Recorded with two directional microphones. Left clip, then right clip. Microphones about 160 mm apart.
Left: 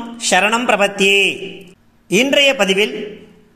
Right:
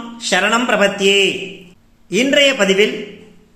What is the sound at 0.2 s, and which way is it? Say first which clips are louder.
A man's voice: left 1 dB; 40° left (ahead or behind).